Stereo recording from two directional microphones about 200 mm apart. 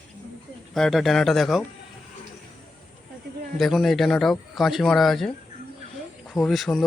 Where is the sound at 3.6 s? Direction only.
Centre (ahead or behind).